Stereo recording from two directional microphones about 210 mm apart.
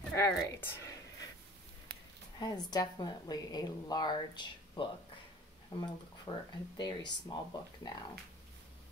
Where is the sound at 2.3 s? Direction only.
20° left (ahead or behind).